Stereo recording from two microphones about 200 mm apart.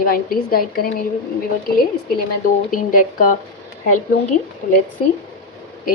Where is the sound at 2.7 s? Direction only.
45° left (ahead or behind).